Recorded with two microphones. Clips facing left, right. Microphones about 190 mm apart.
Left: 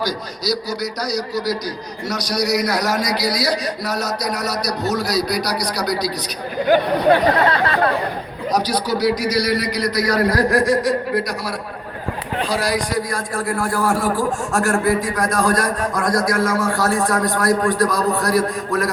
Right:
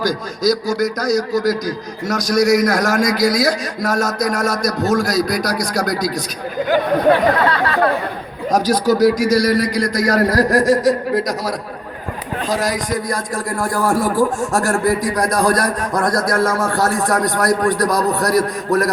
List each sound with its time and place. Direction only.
0.0 s a man's voice: 45° right (ahead or behind)
7.3 s a sound: 25° left (ahead or behind)
8.5 s a man's voice: 45° right (ahead or behind)
12.7 s a man's voice: 45° right (ahead or behind)
16.3 s a man's voice: 55° right (ahead or behind)